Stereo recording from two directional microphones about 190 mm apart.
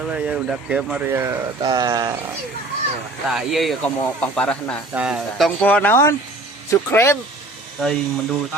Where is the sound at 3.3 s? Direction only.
Centre (ahead or behind).